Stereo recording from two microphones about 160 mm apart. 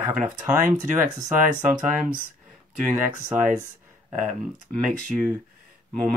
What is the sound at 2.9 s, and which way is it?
Speech, 15° right (ahead or behind).